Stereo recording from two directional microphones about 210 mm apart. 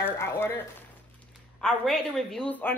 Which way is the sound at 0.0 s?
10° left (ahead or behind).